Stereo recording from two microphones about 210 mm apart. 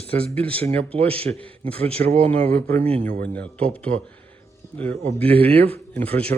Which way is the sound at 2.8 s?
30° right (ahead or behind).